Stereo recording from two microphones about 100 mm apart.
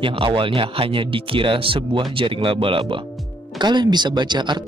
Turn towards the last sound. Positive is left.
turn(degrees=-50)  # may be behind; listen again after turning